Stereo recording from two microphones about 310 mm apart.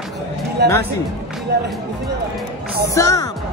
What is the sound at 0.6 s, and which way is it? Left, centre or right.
Speech, right.